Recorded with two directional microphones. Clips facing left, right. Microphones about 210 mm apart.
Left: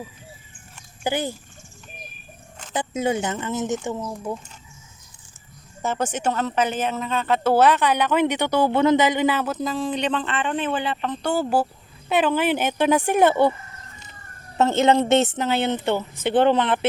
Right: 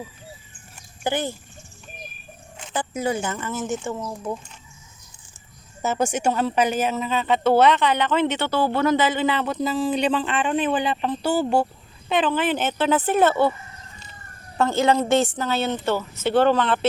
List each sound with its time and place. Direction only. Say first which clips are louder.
1.0 s speech: even; 10° left (ahead or behind)
2.7 s a woman's voice: left 2 dB; 20° left (ahead or behind)
5.8 s speech: right 2 dB; 10° right (ahead or behind); by 13.5 s 15° left (ahead or behind)
14.6 s a woman's voice: left 2 dB; 20° left (ahead or behind)